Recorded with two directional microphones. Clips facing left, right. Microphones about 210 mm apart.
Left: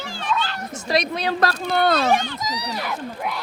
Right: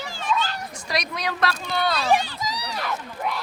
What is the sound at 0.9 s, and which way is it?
Speech, 25° left (ahead or behind).